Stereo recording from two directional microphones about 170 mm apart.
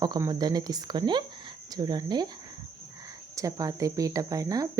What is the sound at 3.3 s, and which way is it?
Speech, 20° right (ahead or behind).